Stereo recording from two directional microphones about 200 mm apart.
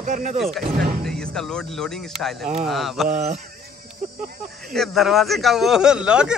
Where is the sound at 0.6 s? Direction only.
50° right (ahead or behind).